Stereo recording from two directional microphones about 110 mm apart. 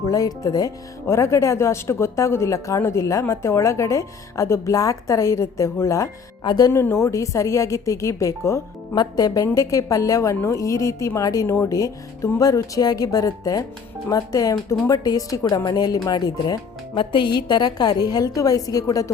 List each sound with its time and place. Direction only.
0.0 s speech: 30° left (ahead or behind)
6.4 s speech: 40° left (ahead or behind)
6.7 s a woman's voice: 25° left (ahead or behind)
17.0 s a woman's voice: 50° left (ahead or behind); by 19.1 s 30° left (ahead or behind)